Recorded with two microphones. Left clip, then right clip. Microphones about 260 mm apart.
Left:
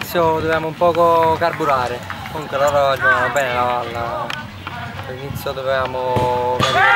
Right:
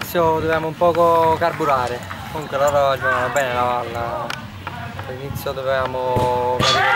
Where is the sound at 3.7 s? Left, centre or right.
Centre.